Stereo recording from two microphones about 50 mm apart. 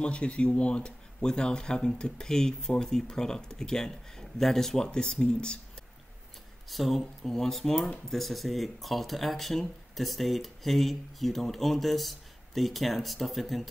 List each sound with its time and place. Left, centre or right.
0.0 s speech: left
6.7 s speech: centre